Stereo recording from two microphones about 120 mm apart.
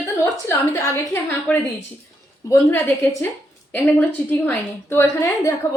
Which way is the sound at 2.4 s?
25° left (ahead or behind).